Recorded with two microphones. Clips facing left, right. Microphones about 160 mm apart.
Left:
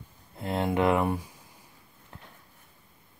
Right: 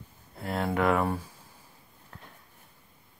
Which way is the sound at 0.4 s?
20° left (ahead or behind).